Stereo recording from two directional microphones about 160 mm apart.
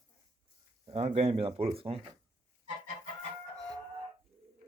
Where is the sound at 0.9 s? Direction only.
40° right (ahead or behind).